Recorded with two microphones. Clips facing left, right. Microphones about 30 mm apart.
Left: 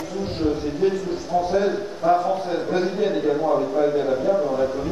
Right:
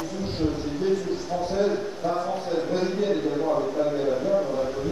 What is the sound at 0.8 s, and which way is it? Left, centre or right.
A man's voice, centre.